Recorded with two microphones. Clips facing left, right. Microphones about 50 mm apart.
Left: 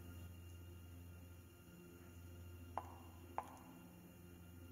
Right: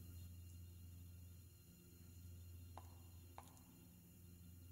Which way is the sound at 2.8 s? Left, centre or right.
Left.